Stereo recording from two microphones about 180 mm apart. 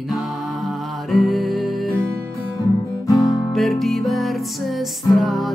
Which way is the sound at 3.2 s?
20° left (ahead or behind).